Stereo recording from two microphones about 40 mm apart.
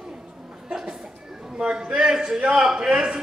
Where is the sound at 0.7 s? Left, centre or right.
Centre.